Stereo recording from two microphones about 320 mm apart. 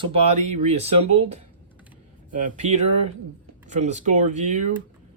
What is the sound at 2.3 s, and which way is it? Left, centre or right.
Speech, right.